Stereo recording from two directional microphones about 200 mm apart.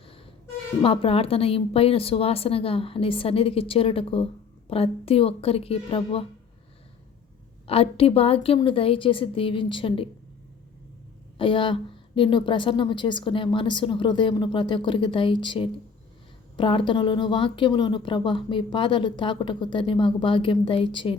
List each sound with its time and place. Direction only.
0.8 s speech: 30° left (ahead or behind)
7.7 s speech: 30° left (ahead or behind)
11.3 s speech: 25° left (ahead or behind)